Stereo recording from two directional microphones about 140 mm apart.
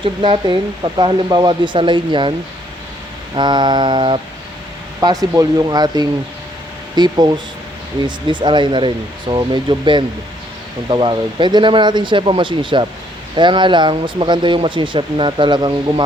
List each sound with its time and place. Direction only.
0.0 s speech: 35° right (ahead or behind)
3.3 s speech: 35° right (ahead or behind)